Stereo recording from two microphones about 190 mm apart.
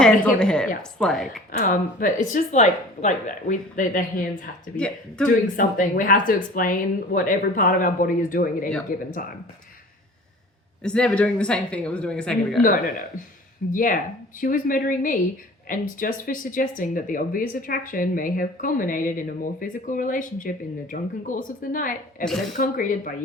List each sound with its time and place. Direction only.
0.0 s speech: 5° left (ahead or behind)
1.5 s speech: 45° left (ahead or behind)
4.8 s speech: 5° left (ahead or behind)
5.5 s speech: 45° left (ahead or behind)
10.8 s speech: 5° left (ahead or behind)
12.6 s speech: 45° left (ahead or behind)